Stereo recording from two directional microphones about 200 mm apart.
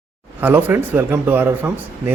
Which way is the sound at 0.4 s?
10° right (ahead or behind).